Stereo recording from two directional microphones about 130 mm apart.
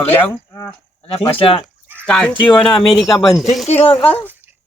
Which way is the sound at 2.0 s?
5° left (ahead or behind).